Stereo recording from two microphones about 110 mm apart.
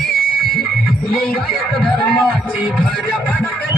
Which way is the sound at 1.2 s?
5° left (ahead or behind).